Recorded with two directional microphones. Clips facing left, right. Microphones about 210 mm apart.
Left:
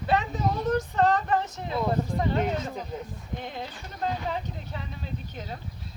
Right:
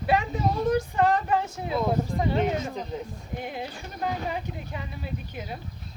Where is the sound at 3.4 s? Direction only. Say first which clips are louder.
Right 4 dB; 10° right (ahead or behind).